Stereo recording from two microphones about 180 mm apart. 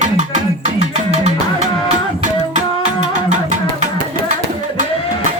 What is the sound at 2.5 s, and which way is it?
Music, 40° right (ahead or behind).